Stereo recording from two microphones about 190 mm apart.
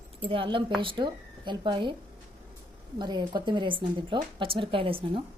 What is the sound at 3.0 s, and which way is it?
Speech, 25° right (ahead or behind).